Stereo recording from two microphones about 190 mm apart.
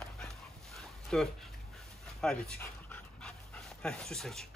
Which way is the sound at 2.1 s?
5° left (ahead or behind).